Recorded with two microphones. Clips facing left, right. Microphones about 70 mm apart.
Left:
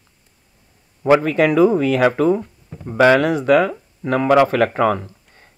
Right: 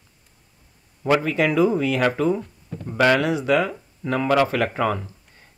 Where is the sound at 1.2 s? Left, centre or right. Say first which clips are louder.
Left 4 dB; left.